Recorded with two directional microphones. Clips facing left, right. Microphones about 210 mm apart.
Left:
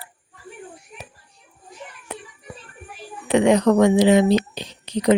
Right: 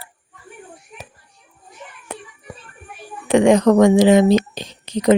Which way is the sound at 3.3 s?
50° right (ahead or behind).